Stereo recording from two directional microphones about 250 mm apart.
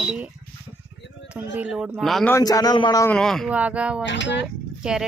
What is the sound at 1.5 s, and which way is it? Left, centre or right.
Speech, centre.